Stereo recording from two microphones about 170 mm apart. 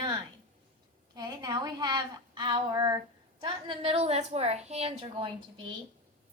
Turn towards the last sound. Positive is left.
turn(degrees=-30)  # may be behind; listen again after turning